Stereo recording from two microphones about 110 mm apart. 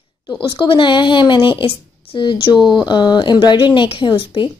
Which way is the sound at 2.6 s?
Centre (ahead or behind).